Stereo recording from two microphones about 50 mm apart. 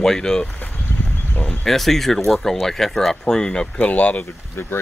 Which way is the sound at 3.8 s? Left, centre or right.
Left.